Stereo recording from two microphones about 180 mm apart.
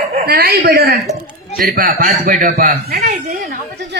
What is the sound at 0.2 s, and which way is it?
A man's voice, 55° right (ahead or behind).